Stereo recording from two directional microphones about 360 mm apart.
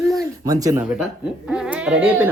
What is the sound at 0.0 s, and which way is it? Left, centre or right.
Speech, centre.